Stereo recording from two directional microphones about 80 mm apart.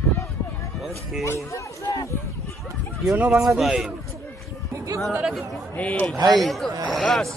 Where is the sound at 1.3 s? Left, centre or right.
Left.